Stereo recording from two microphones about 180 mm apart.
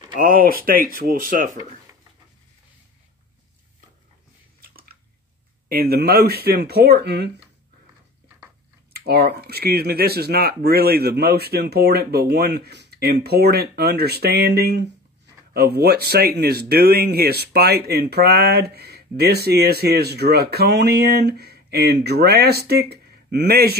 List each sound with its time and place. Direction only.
0.2 s speech: 50° right (ahead or behind)
4.6 s chewing: 55° right (ahead or behind)
5.7 s speech: 60° right (ahead or behind)
8.9 s speech: 60° right (ahead or behind)